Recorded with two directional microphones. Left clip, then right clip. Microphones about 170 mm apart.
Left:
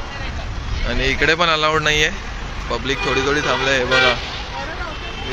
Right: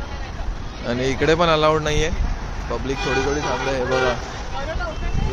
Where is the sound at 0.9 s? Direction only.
25° right (ahead or behind); by 4.1 s centre (ahead or behind).